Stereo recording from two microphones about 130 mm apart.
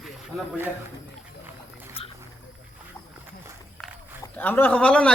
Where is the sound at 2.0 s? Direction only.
45° left (ahead or behind).